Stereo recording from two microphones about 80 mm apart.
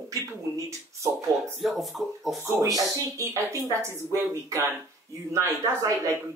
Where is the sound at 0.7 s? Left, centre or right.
Right.